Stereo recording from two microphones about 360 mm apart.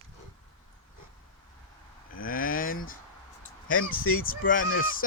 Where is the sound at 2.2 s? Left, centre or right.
Left.